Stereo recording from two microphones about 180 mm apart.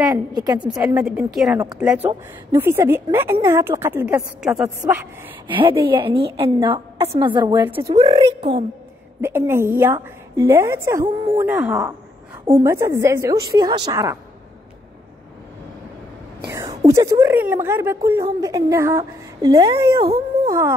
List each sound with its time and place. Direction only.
0.1 s a woman's voice: 20° right (ahead or behind)
0.8 s a woman's voice: 5° right (ahead or behind)
5.5 s a woman's voice: 30° right (ahead or behind)
7.5 s a woman's voice: 10° right (ahead or behind)
7.9 s a woman's voice: 35° right (ahead or behind)
9.2 s a woman's voice: 15° right (ahead or behind)
16.8 s a woman's voice: 15° right (ahead or behind)